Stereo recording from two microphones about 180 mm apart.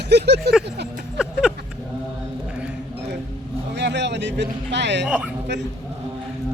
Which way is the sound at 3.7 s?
75° right (ahead or behind).